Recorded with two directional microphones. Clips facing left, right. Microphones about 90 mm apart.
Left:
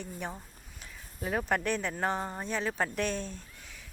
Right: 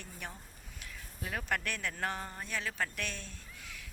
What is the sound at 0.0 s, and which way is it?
Speech, 25° left (ahead or behind).